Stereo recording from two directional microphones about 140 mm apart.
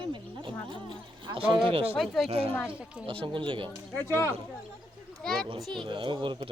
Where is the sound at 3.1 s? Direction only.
40° right (ahead or behind).